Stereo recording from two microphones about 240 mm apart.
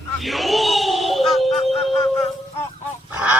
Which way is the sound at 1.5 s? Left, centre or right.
Left.